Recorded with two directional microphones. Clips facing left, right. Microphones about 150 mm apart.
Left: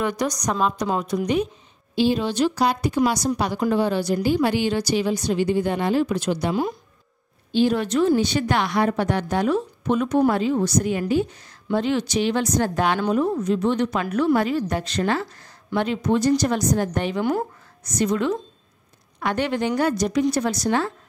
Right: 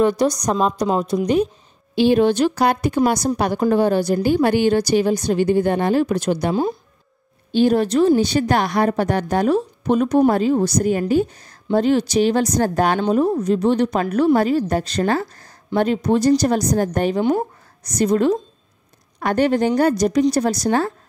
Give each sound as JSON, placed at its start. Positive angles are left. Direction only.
{"t": 0.0, "sound": "a woman's voice", "side_deg": -30}
{"t": 2.0, "sound": "a woman's voice", "side_deg": -60}
{"t": 7.5, "sound": "a woman's voice", "side_deg": -45}
{"t": 17.2, "sound": "speech", "side_deg": -20}
{"t": 17.8, "sound": "a woman's voice", "side_deg": -40}